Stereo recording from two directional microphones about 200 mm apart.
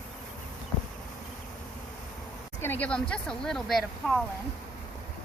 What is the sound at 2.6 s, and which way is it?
Speech, 10° left (ahead or behind).